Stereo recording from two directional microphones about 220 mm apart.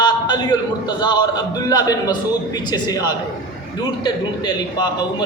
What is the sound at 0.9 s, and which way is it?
A man's voice, 20° left (ahead or behind).